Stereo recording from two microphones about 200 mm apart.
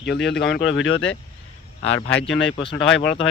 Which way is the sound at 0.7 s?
75° left (ahead or behind).